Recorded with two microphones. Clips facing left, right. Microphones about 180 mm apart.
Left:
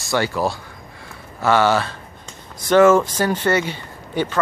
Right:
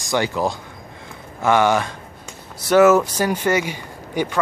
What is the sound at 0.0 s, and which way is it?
Speech, 20° right (ahead or behind).